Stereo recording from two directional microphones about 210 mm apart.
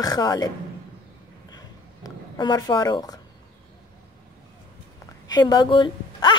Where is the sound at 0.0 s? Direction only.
20° left (ahead or behind).